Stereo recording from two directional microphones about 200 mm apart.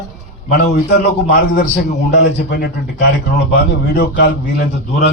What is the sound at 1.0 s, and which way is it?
A man's voice, 55° left (ahead or behind).